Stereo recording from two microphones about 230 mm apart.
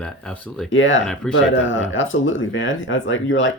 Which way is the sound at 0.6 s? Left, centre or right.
Left.